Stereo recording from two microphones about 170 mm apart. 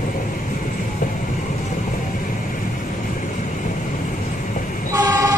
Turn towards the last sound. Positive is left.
turn(degrees=-15)  # may be behind; listen again after turning